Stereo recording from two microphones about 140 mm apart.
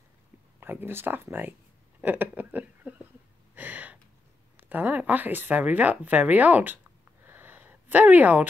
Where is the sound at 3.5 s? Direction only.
10° right (ahead or behind).